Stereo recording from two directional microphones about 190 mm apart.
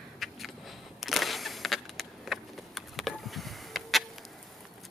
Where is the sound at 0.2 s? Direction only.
Centre (ahead or behind).